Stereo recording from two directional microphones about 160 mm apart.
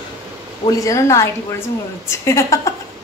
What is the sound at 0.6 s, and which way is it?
A woman's voice, 20° left (ahead or behind).